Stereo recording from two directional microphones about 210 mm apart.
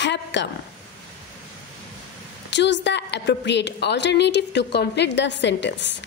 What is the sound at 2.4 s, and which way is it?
A woman's voice, 55° left (ahead or behind).